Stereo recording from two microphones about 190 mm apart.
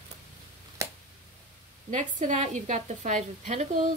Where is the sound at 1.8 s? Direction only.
40° right (ahead or behind).